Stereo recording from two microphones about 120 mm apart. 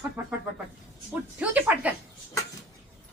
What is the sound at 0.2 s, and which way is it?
Speech, 15° right (ahead or behind).